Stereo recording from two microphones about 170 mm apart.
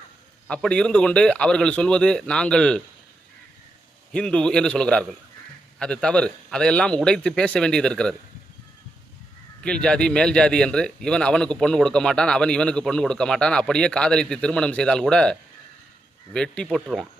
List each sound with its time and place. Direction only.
0.4 s a man's voice: 5° left (ahead or behind)
4.1 s a man's voice: 5° left (ahead or behind)
9.6 s a man's voice: 5° left (ahead or behind)